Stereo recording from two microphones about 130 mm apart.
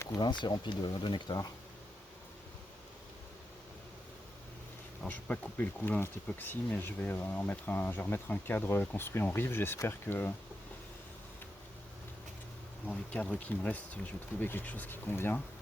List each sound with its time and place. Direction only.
0.1 s speech: 35° left (ahead or behind)
5.0 s speech: 15° left (ahead or behind)
12.9 s speech: 5° left (ahead or behind)